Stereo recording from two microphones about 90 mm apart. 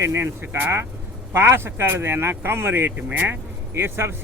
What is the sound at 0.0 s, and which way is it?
Speech, 30° right (ahead or behind).